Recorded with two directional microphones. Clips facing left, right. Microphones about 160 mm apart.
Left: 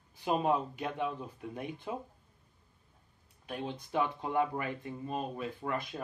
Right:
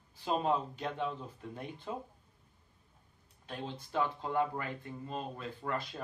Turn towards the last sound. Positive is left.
turn(degrees=15)  # may be behind; listen again after turning